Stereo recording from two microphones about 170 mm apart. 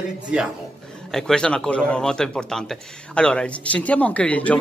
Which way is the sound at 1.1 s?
5° left (ahead or behind).